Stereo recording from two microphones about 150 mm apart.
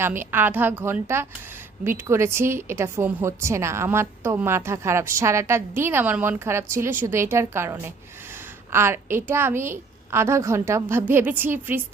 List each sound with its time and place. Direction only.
0.0 s a woman's voice: 15° right (ahead or behind)